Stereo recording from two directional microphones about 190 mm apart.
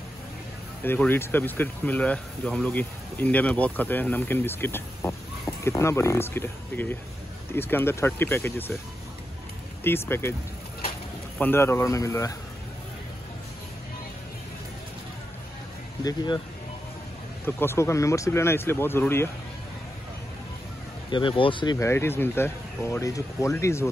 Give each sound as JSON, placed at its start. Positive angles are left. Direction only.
{"t": 0.8, "sound": "speech", "side_deg": 10}
{"t": 9.8, "sound": "speech", "side_deg": 10}
{"t": 11.3, "sound": "speech", "side_deg": 10}
{"t": 16.0, "sound": "speech", "side_deg": 20}
{"t": 17.5, "sound": "speech", "side_deg": 10}
{"t": 21.1, "sound": "speech", "side_deg": 25}
{"t": 21.7, "sound": "speech", "side_deg": 15}